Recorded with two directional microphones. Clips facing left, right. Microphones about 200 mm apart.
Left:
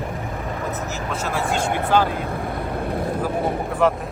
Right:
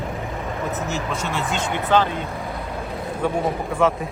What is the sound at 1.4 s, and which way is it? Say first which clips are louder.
Speech: left 2 dB; 55° left (ahead or behind).